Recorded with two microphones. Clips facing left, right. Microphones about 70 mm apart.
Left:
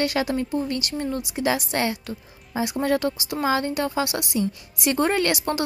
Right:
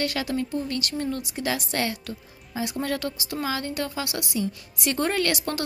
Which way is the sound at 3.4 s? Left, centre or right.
Left.